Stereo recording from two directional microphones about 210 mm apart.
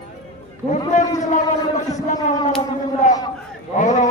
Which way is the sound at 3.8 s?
35° left (ahead or behind).